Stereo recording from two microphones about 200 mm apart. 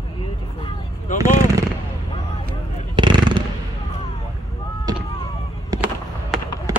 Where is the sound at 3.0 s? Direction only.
25° right (ahead or behind).